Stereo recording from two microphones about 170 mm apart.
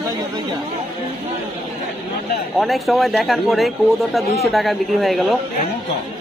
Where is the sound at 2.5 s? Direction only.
Centre (ahead or behind).